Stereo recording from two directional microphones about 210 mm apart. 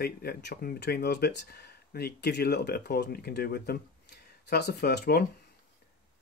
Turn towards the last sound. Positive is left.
turn(degrees=50)  # may be behind; listen again after turning